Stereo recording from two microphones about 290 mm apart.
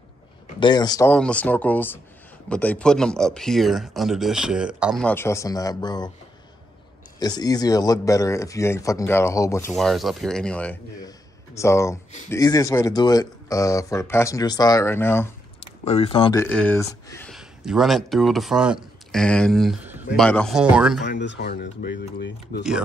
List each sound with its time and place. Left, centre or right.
0.6 s speech: centre
7.2 s speech: centre
15.8 s speech: left
16.4 s speech: centre
21.0 s speech: left
22.6 s speech: centre